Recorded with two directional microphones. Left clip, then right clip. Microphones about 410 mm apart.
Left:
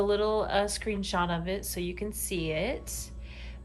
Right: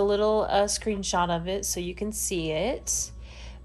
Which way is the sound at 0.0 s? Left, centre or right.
Centre.